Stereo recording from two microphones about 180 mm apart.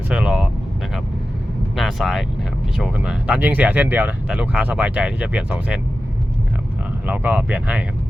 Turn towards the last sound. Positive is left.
turn(degrees=-5)  # may be behind; listen again after turning